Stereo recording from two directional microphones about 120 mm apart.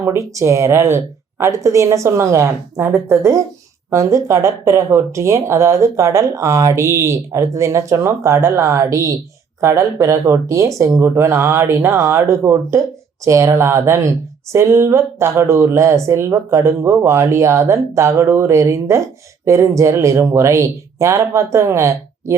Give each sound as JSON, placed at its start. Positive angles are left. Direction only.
{"t": 0.0, "sound": "speech", "side_deg": -25}